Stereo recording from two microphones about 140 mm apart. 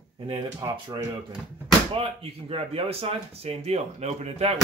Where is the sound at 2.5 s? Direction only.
45° right (ahead or behind).